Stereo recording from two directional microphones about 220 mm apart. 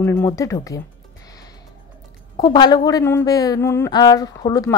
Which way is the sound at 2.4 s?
20° left (ahead or behind).